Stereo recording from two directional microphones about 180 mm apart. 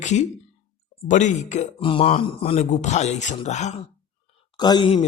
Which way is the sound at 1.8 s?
30° left (ahead or behind).